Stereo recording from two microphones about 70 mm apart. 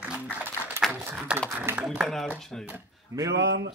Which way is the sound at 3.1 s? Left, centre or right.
Right.